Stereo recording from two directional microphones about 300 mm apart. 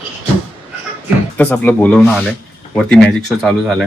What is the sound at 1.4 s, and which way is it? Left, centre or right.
Speech, centre.